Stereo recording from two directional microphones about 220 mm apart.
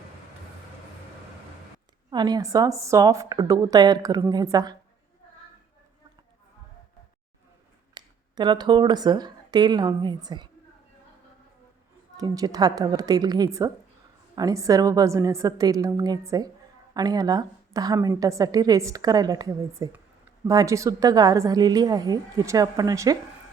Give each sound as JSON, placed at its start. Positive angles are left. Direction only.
{"t": 2.0, "sound": "a woman's voice", "side_deg": -20}
{"t": 7.9, "sound": "speech", "side_deg": -20}
{"t": 12.1, "sound": "a woman's voice", "side_deg": -15}